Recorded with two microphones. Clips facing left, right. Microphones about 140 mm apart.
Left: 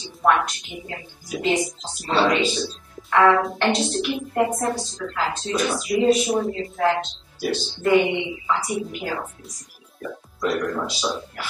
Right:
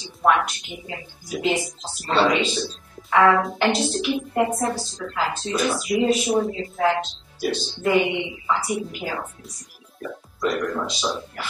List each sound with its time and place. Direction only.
0.2 s a woman's voice: centre (ahead or behind)
2.0 s a woman's voice: centre (ahead or behind)
10.4 s a woman's voice: centre (ahead or behind)